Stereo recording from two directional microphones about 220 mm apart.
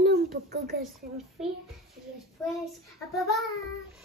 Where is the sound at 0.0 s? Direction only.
45° right (ahead or behind).